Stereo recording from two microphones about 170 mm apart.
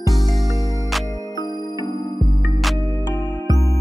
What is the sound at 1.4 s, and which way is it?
Music, 25° right (ahead or behind).